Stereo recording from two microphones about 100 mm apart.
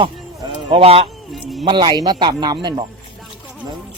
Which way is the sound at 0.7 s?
80° right.